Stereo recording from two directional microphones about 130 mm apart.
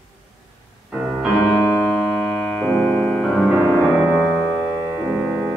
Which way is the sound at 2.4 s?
5° left (ahead or behind).